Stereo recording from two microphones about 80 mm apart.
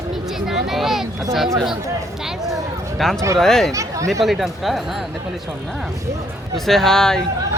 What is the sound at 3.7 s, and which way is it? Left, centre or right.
Speech, right.